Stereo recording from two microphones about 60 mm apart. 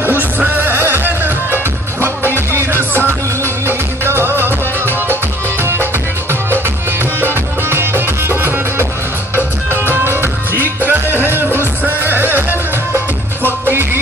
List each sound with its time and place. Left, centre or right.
0.0 s music: right
7.2 s music: right
9.9 s music: right